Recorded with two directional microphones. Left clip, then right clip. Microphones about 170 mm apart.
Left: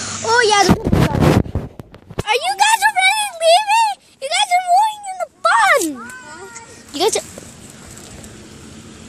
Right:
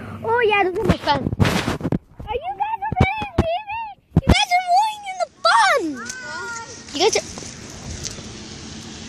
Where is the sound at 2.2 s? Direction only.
30° left (ahead or behind).